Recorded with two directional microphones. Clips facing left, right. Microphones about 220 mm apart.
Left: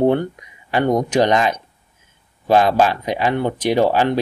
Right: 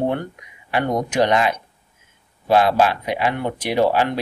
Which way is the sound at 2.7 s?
35° left (ahead or behind).